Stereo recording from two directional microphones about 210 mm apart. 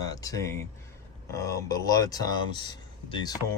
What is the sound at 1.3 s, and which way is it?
Speech, 15° left (ahead or behind).